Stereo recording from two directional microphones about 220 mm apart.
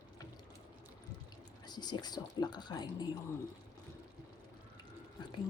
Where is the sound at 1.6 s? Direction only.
20° left (ahead or behind).